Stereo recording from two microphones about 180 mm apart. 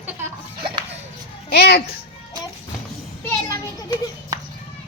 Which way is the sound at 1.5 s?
65° left (ahead or behind).